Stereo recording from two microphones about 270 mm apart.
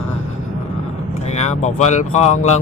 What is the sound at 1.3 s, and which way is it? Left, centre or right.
Speech, left.